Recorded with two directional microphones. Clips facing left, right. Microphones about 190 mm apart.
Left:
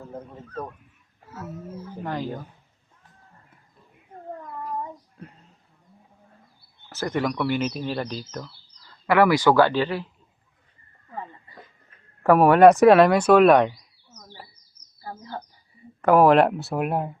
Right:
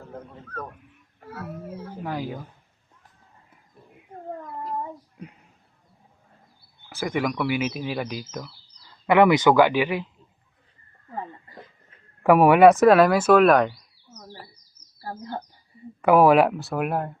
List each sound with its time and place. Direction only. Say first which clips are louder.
1.2 s roaring cats: right 1 dB; 60° right (ahead or behind)
2.0 s a man's voice: left 1 dB; 10° right (ahead or behind)
4.7 s a sound: right 1 dB; 20° right (ahead or behind)
6.9 s a man's voice: even; 10° right (ahead or behind)
12.2 s a man's voice: even; 10° right (ahead or behind)
12.6 s speech: left 2 dB; centre (ahead or behind)
15.0 s bird: right 3 dB; 40° right (ahead or behind)
16.0 s speech: even; 10° right (ahead or behind)